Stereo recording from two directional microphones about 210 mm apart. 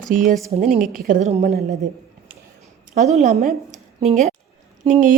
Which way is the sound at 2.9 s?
35° right (ahead or behind).